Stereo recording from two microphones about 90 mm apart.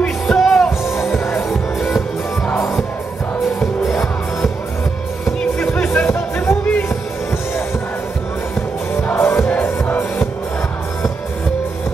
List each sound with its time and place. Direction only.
0.3 s music: centre (ahead or behind)
1.1 s music: 30° left (ahead or behind)
1.8 s music: centre (ahead or behind)
3.5 s music: centre (ahead or behind)
5.6 s music: 20° left (ahead or behind)
9.1 s music: 25° left (ahead or behind)